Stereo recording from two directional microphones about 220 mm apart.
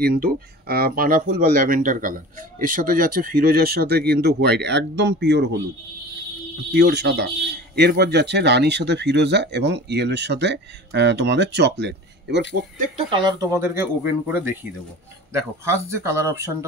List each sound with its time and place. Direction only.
0.0 s speech: 45° right (ahead or behind)
6.7 s speech: 50° right (ahead or behind)
12.8 s speech: 25° right (ahead or behind)